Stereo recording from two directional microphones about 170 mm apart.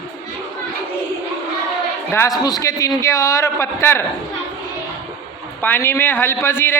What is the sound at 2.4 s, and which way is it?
Speech, 20° left (ahead or behind).